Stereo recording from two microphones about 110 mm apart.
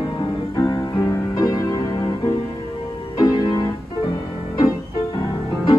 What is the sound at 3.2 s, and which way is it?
Music, 40° left (ahead or behind).